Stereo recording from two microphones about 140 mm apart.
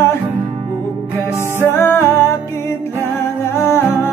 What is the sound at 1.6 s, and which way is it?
Music, 15° left (ahead or behind).